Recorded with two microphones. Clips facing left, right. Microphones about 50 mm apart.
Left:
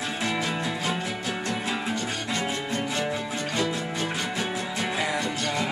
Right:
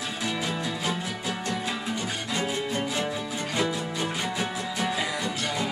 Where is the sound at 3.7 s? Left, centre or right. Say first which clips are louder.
Left 1 dB; left.